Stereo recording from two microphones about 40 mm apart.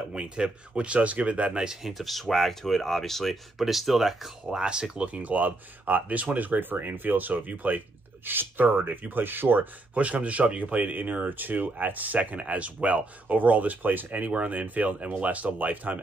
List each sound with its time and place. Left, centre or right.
0.1 s speech: right
1.6 s speech: centre
1.9 s speech: centre
3.5 s speech: centre
4.5 s speech: right
5.0 s speech: right
8.3 s speech: right
8.6 s speech: right
9.9 s speech: right